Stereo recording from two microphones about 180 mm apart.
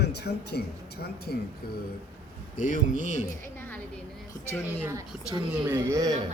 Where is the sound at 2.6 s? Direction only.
45° left (ahead or behind).